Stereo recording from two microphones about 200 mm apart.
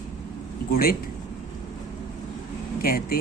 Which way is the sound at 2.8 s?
50° left (ahead or behind).